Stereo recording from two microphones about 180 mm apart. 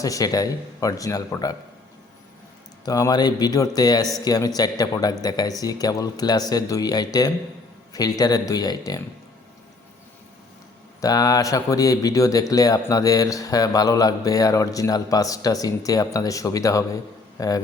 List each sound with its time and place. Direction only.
0.0 s speech: 20° left (ahead or behind)
2.8 s speech: 20° left (ahead or behind)
11.0 s speech: 20° left (ahead or behind)